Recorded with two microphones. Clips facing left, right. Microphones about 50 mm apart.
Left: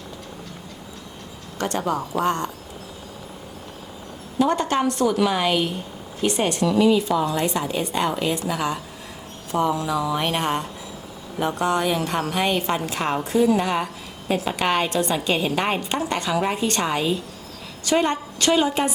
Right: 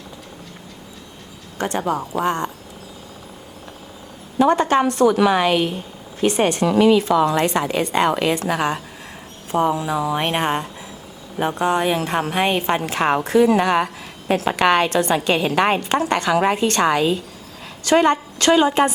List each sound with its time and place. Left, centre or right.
1.5 s speech: right
4.4 s a woman's voice: right
6.7 s a woman's voice: right
8.5 s a woman's voice: right
9.5 s a woman's voice: right
13.2 s a woman's voice: right